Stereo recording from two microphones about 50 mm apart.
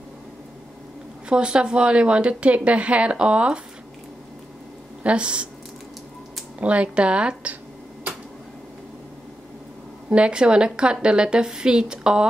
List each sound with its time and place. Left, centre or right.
1.3 s a woman's voice: centre
5.0 s a woman's voice: right
6.6 s a woman's voice: right
10.0 s a woman's voice: right